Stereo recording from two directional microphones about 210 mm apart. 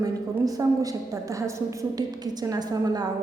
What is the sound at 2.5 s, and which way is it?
Speech, 20° right (ahead or behind).